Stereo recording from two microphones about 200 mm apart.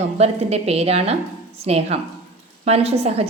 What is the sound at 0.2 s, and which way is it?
A woman's voice, 30° right (ahead or behind).